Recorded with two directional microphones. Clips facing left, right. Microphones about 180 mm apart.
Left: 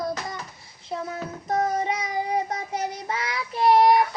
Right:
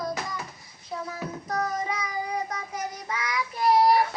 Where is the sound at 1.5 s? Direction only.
25° left (ahead or behind).